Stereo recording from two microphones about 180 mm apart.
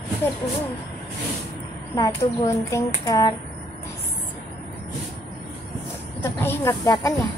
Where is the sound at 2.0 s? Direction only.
15° left (ahead or behind).